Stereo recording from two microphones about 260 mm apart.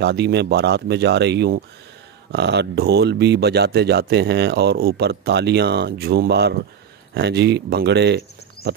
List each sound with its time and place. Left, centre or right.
0.0 s speech: right